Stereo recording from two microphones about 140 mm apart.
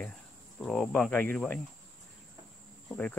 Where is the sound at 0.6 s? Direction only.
Centre (ahead or behind).